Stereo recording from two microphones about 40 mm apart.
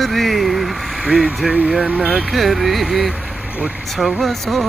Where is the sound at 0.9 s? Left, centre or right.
Centre.